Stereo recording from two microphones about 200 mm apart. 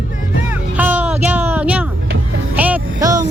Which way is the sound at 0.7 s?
10° right (ahead or behind).